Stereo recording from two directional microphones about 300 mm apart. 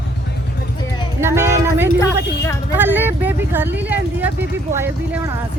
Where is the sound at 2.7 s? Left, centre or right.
Centre.